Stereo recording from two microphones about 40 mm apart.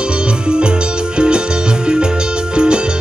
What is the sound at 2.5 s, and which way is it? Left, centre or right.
Music, right.